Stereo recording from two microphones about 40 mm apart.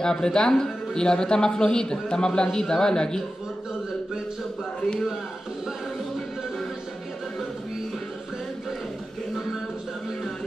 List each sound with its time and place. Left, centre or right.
0.0 s speech: centre